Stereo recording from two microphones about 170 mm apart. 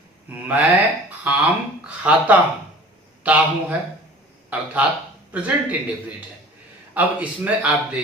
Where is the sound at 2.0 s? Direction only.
10° right (ahead or behind).